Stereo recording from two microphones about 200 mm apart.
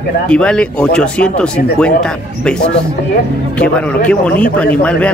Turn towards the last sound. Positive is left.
turn(degrees=5)  # may be behind; listen again after turning